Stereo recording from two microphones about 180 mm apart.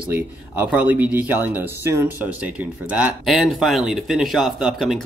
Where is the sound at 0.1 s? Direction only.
10° right (ahead or behind).